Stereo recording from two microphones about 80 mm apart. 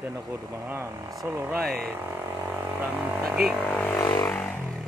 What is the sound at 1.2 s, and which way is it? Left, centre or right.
Speech, right.